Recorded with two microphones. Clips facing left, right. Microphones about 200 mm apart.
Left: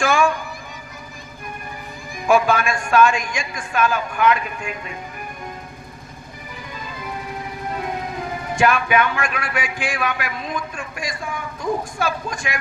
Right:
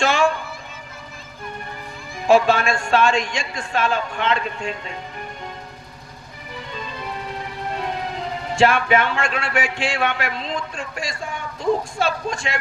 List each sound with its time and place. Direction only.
0.0 s a man's voice: 25° right (ahead or behind)
2.2 s a man's voice: 25° right (ahead or behind)
8.5 s a man's voice: 25° right (ahead or behind)